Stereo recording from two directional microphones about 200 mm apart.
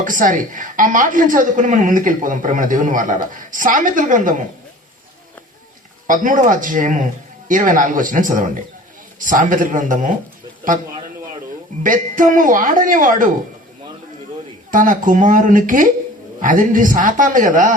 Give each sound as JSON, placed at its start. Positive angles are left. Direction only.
{"t": 0.0, "sound": "a woman's voice", "side_deg": -40}
{"t": 6.1, "sound": "a woman's voice", "side_deg": -40}
{"t": 11.8, "sound": "a woman's voice", "side_deg": -40}
{"t": 14.7, "sound": "a woman's voice", "side_deg": -40}